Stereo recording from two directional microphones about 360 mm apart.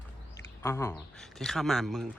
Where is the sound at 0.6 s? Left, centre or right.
Centre.